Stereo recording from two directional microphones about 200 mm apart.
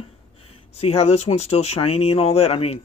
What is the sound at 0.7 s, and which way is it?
Speech, 30° left (ahead or behind).